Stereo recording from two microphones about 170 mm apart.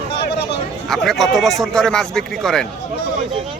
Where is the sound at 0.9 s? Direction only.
Centre (ahead or behind).